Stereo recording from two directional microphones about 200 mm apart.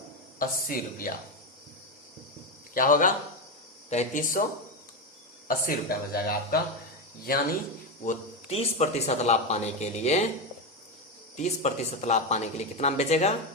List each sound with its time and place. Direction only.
0.3 s speech: 45° left (ahead or behind)
2.7 s speech: 45° left (ahead or behind)
5.5 s speech: 45° left (ahead or behind)
8.0 s speech: 35° left (ahead or behind)
11.3 s speech: 35° left (ahead or behind)